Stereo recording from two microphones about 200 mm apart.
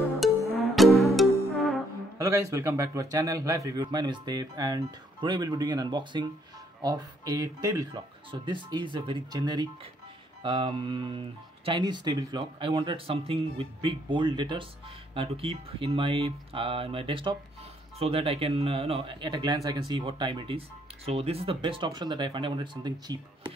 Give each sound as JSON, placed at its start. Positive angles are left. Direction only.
{"t": 0.2, "sound": "music", "side_deg": 0}
{"t": 2.1, "sound": "speech", "side_deg": -15}